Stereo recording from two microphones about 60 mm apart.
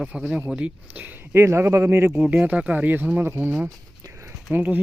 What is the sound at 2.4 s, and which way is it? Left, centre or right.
Speech, right.